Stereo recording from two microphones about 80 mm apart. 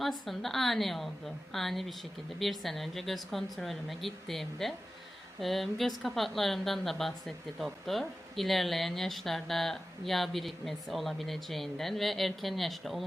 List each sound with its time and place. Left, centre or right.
0.0 s a woman's voice: centre